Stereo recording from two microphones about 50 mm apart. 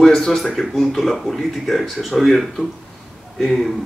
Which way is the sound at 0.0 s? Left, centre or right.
Centre.